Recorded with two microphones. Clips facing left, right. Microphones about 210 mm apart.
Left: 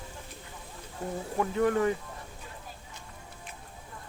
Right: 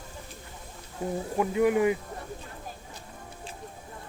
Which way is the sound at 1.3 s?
10° right (ahead or behind).